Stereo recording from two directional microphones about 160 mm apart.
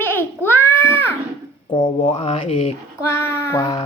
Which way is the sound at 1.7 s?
30° left (ahead or behind).